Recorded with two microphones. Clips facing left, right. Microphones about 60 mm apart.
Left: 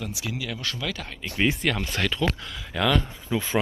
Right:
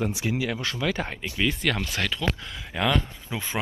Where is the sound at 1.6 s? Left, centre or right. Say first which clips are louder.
Left 1 dB; centre.